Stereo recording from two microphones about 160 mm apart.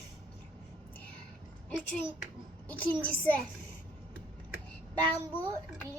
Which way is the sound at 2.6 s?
10° left (ahead or behind).